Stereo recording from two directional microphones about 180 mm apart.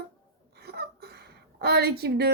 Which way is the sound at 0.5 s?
65° right (ahead or behind).